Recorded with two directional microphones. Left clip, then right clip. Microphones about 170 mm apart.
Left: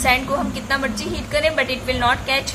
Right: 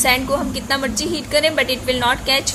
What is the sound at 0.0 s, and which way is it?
A woman's voice, 50° right (ahead or behind).